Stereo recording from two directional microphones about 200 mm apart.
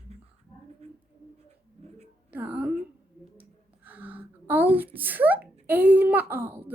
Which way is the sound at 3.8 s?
10° right (ahead or behind).